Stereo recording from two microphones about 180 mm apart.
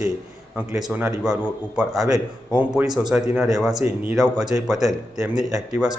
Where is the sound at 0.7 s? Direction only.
5° right (ahead or behind).